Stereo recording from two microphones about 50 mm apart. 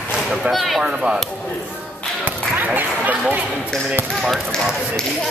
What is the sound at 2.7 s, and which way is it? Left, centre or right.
Speech, right.